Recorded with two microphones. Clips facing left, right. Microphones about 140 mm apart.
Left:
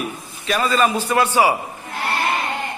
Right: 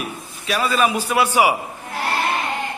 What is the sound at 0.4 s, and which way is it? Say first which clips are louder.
A man's voice: left 1 dB; 5° right (ahead or behind).